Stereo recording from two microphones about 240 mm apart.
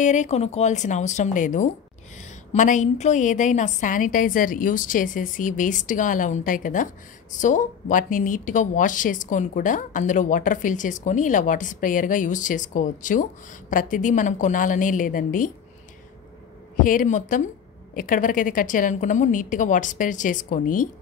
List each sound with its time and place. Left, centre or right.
0.0 s a woman's voice: left
16.7 s a woman's voice: left